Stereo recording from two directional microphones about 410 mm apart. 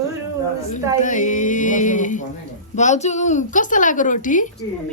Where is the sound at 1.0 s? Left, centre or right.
Centre.